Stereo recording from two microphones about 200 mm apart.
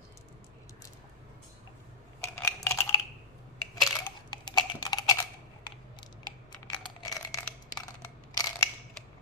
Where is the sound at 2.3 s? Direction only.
15° left (ahead or behind).